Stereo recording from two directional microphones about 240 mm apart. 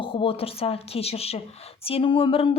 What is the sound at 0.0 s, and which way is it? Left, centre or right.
Speech, left.